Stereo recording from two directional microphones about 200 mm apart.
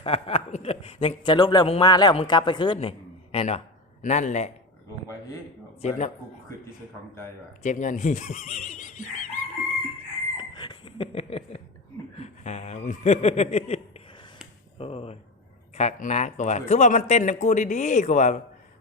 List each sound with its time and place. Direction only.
0.0 s a man's voice: 30° left (ahead or behind)
5.8 s speech: 35° left (ahead or behind)
7.6 s speech: 40° left (ahead or behind)
10.3 s a sound: 20° left (ahead or behind)
12.1 s chuckle: 35° left (ahead or behind)
14.8 s speech: 30° left (ahead or behind)